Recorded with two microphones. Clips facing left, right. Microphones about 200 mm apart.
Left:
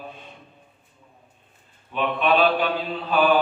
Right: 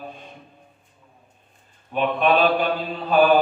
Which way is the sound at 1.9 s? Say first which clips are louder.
Right 2 dB; 45° right (ahead or behind).